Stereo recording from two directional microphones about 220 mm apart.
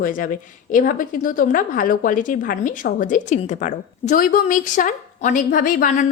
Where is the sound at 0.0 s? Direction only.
40° left (ahead or behind).